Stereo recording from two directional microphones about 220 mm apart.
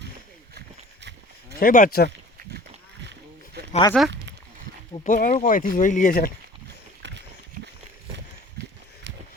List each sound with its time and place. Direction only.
1.5 s speech: 40° left (ahead or behind)
3.7 s speech: 20° left (ahead or behind)
5.0 s speech: 35° left (ahead or behind)
7.0 s a sound: 55° right (ahead or behind)